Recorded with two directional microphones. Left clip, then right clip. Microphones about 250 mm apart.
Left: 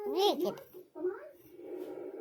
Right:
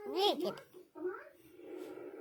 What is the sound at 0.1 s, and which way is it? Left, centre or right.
Speech, centre.